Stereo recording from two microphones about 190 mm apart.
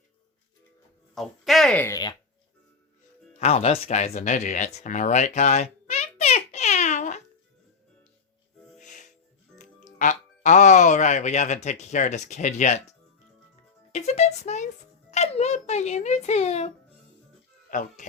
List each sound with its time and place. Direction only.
1.1 s speech: centre (ahead or behind); by 2.1 s 20° left (ahead or behind)
3.3 s a sound: 35° left (ahead or behind)
8.8 s music: 40° left (ahead or behind)
9.6 s speech: 40° left (ahead or behind)
13.9 s a sound: 35° left (ahead or behind)
15.1 s speech: 35° left (ahead or behind)